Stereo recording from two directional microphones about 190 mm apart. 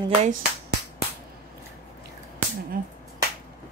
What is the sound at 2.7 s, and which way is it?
Finger snapping, 50° right (ahead or behind).